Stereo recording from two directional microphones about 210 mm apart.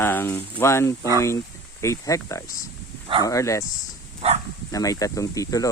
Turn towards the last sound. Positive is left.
turn(degrees=15)  # may be behind; listen again after turning